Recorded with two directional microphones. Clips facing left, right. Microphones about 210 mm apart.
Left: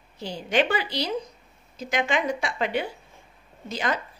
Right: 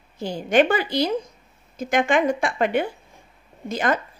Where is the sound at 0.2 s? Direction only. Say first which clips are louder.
Right 6 dB; 50° right (ahead or behind).